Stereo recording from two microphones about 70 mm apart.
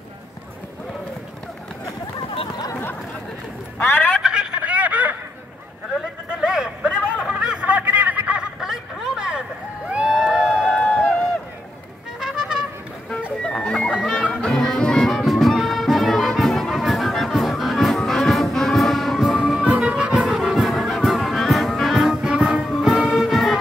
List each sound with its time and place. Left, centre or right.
3.8 s telephone: left
4.2 s telephone: centre
5.9 s a sound: centre
8.4 s snicker: centre
9.8 s crowd: centre
12.2 s music: centre
13.4 s music: centre
19.9 s music: centre
20.2 s music: centre
22.1 s music: centre
22.7 s music: centre